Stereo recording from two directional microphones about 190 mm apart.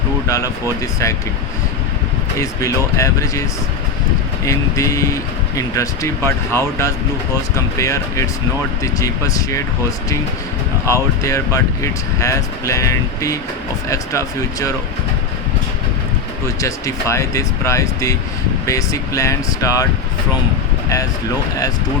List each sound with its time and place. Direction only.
0.3 s speech: 15° left (ahead or behind)
2.4 s speech: 15° left (ahead or behind)
4.4 s speech: 15° left (ahead or behind)
10.8 s speech: 15° left (ahead or behind)
16.6 s speech: 15° left (ahead or behind)